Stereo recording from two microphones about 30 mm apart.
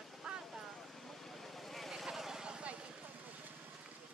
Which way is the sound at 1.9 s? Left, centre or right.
Centre.